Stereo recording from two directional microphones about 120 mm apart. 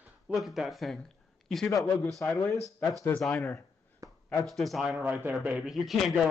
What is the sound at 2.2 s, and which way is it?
Speech, 15° left (ahead or behind).